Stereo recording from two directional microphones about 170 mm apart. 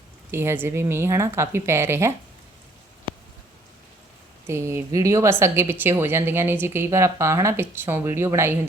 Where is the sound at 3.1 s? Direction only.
30° right (ahead or behind).